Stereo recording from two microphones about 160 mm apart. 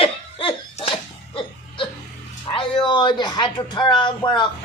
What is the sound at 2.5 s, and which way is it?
A woman's voice, 30° left (ahead or behind).